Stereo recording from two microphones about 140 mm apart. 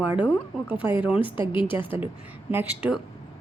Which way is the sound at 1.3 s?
35° left (ahead or behind).